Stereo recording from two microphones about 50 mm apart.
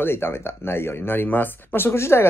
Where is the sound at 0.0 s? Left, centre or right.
Left.